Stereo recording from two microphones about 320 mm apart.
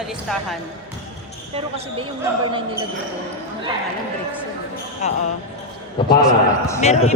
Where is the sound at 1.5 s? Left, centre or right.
Centre.